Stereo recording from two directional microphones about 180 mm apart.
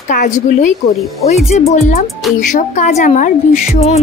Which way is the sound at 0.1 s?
45° left (ahead or behind).